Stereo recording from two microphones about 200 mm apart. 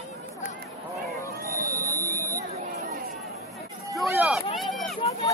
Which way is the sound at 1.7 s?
15° right (ahead or behind).